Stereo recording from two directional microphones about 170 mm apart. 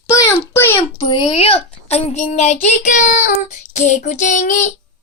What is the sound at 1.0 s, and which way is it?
A child's voice, 25° left (ahead or behind).